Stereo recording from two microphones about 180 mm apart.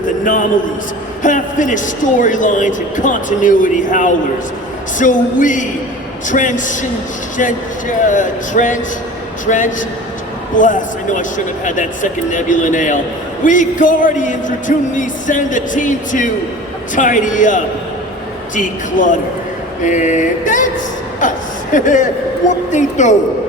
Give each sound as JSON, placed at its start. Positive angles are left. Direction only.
{"t": 1.2, "sound": "a woman's voice", "side_deg": 45}